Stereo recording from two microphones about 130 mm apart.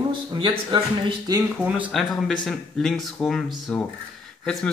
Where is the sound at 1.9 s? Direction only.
Centre (ahead or behind).